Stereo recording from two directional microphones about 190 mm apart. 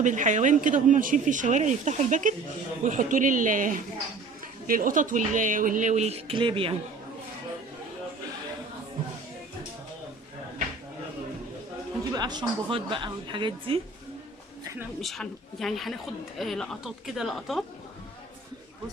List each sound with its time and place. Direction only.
0.0 s speech: 40° right (ahead or behind)
12.1 s speech: 20° right (ahead or behind)
14.6 s a sound: 15° right (ahead or behind)
15.0 s a woman's voice: centre (ahead or behind)